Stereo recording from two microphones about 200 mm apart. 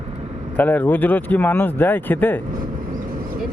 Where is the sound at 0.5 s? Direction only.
10° left (ahead or behind).